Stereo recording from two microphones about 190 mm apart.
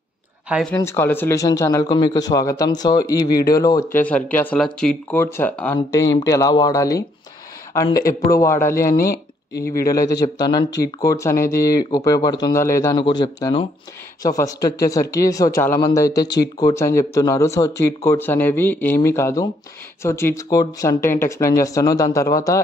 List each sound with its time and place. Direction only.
0.5 s speech: centre (ahead or behind)
0.7 s speech: 15° left (ahead or behind)
4.0 s speech: 10° left (ahead or behind)
7.9 s speech: 50° left (ahead or behind)
8.3 s speech: 15° left (ahead or behind)
9.5 s speech: 55° left (ahead or behind)
9.9 s speech: 20° left (ahead or behind)